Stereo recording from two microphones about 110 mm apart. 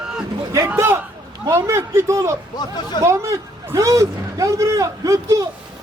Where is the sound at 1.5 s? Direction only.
25° right (ahead or behind).